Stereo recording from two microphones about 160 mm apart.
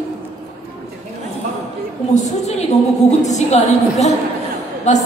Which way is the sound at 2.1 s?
50° left (ahead or behind).